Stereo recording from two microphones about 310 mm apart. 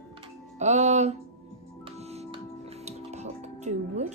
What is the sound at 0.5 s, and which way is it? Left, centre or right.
Speech, right.